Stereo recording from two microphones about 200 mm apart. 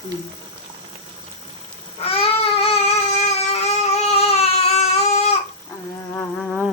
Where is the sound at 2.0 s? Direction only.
30° left (ahead or behind).